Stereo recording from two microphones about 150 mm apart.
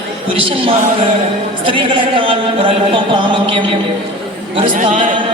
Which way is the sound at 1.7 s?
35° right (ahead or behind).